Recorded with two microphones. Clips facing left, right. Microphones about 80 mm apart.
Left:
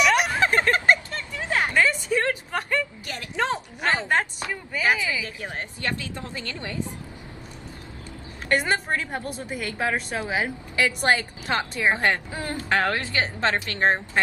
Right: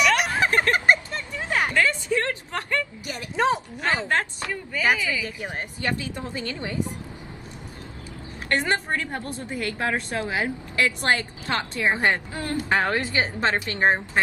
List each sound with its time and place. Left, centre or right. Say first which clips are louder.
0.0 s a sound: left 1 dB; centre
0.7 s vehicle: right 1 dB; right
1.7 s a sound: left 1 dB; centre
3.1 s a sound: right 5 dB; centre
3.8 s speech: left 2 dB; centre
5.2 s a woman's voice: right 1 dB; right
8.5 s a woman's voice: left 1 dB; centre
11.9 s a woman's voice: right 1 dB; centre
12.3 s speech: right 1 dB; left
12.5 s a woman's voice: right 1 dB; centre